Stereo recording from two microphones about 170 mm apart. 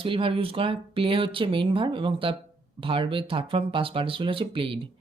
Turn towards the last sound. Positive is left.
turn(degrees=-30)  # may be behind; listen again after turning